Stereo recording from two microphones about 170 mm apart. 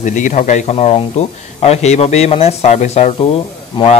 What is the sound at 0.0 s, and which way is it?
Speech, 45° left (ahead or behind).